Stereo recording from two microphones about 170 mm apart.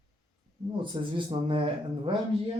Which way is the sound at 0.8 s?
30° right (ahead or behind).